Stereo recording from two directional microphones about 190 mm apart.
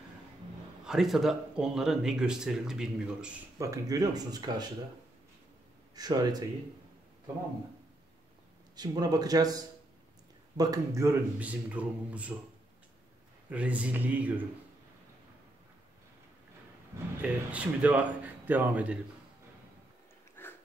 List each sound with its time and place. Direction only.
0.8 s speech: centre (ahead or behind)
3.5 s speech: 15° right (ahead or behind)
5.9 s speech: 20° right (ahead or behind)
8.7 s a man's voice: 20° right (ahead or behind)
13.5 s a man's voice: 5° right (ahead or behind)
17.2 s a man's voice: 5° right (ahead or behind)
20.4 s a sound: 10° left (ahead or behind)